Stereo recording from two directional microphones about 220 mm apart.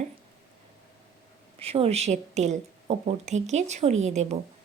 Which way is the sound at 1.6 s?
25° right (ahead or behind).